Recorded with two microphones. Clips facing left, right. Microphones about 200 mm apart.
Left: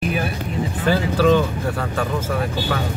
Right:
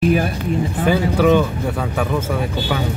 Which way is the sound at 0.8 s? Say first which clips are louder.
Right 1 dB; 15° right (ahead or behind).